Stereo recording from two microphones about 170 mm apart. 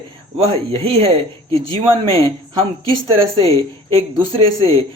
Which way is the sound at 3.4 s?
35° right (ahead or behind).